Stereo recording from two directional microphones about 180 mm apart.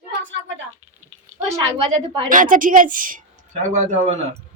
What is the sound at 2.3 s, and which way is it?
A woman's voice, 45° right (ahead or behind).